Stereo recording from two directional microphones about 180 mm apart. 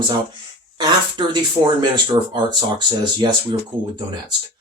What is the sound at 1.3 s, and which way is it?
Speech, 25° right (ahead or behind).